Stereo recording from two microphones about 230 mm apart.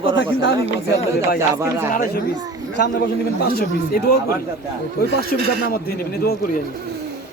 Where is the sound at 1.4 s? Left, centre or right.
Centre.